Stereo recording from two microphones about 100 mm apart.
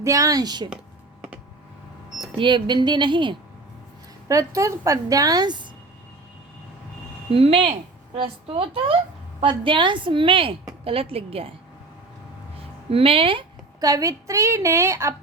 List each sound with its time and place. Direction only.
0.0 s a woman's voice: 30° right (ahead or behind)
2.4 s speech: 50° right (ahead or behind)
4.3 s a woman's voice: 30° right (ahead or behind)
7.3 s a woman's voice: 70° right (ahead or behind)
8.1 s a woman's voice: 60° right (ahead or behind)
9.4 s a woman's voice: 60° right (ahead or behind)
12.9 s a woman's voice: 70° right (ahead or behind)
13.8 s a woman's voice: 35° right (ahead or behind)